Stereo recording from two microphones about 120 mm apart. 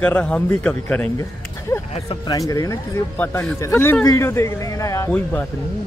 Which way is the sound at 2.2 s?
30° left (ahead or behind).